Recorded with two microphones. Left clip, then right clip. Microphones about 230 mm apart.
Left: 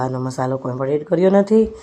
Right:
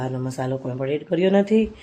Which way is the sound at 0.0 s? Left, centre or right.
Centre.